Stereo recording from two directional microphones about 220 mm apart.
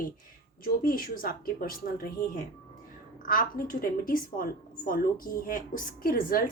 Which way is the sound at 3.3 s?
40° left (ahead or behind).